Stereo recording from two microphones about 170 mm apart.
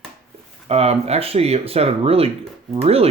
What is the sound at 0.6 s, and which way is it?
Speech, 35° right (ahead or behind).